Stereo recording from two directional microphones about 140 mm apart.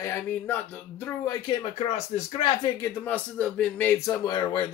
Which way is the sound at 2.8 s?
10° left (ahead or behind).